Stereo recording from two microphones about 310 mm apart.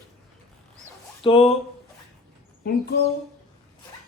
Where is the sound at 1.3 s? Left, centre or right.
Centre.